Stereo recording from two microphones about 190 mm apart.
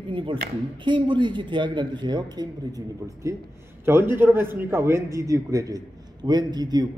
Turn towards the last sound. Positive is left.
turn(degrees=-20)  # may be behind; listen again after turning